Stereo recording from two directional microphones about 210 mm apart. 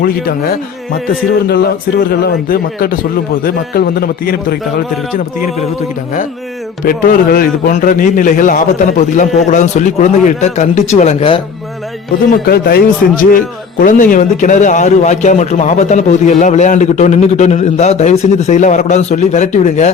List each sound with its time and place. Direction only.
0.0 s a man's voice: 45° left (ahead or behind)
6.8 s a man's voice: 45° left (ahead or behind); by 11.3 s 30° left (ahead or behind)
12.3 s a man's voice: 45° left (ahead or behind)